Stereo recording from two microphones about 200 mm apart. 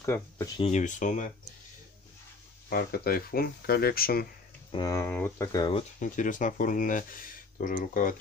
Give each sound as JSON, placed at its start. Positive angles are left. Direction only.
{"t": 0.0, "sound": "speech", "side_deg": 10}
{"t": 0.6, "sound": "speech", "side_deg": 35}
{"t": 2.7, "sound": "speech", "side_deg": 50}
{"t": 4.7, "sound": "speech", "side_deg": 15}
{"t": 5.8, "sound": "speech", "side_deg": 40}